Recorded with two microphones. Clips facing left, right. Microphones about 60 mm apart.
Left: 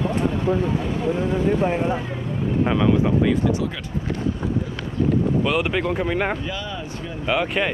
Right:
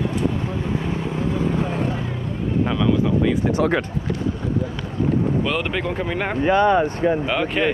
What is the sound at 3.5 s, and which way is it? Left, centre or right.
Speech, right.